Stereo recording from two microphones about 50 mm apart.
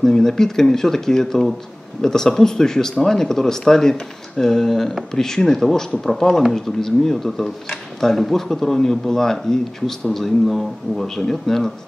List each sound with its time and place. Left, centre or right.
0.0 s speech: centre